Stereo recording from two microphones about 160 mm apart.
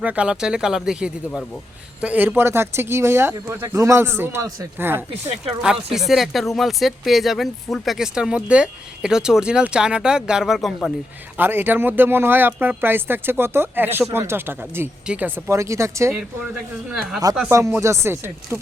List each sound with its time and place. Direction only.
0.0 s speech: 10° right (ahead or behind)
6.1 s speech: centre (ahead or behind)
11.3 s speech: 15° right (ahead or behind)
16.9 s speech: 5° right (ahead or behind)
17.5 s speech: 20° right (ahead or behind)